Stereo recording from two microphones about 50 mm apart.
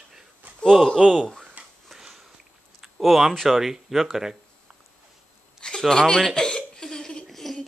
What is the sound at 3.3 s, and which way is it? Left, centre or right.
Speech, centre.